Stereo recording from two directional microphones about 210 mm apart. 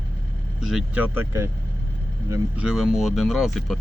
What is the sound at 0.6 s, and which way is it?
Speech, centre (ahead or behind).